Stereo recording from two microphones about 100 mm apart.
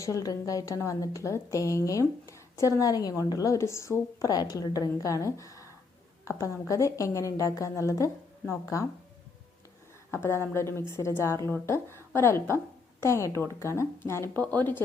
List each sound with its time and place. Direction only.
0.0 s a woman's voice: 35° left (ahead or behind)
6.7 s a woman's voice: 30° left (ahead or behind)
10.2 s a woman's voice: 25° left (ahead or behind)